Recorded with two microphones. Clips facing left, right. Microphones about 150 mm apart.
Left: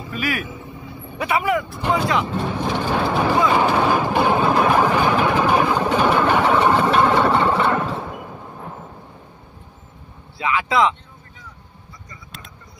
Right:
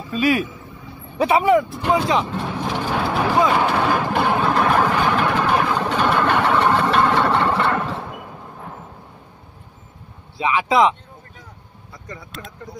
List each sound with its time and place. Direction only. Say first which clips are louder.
0.1 s speech: right 7 dB; 20° right (ahead or behind)
1.8 s speech: right 2 dB; centre (ahead or behind)
2.3 s vehicle: left 2 dB; centre (ahead or behind)
10.3 s speech: right 2 dB; 20° right (ahead or behind)
11.9 s a sound: right 8 dB; 70° right (ahead or behind)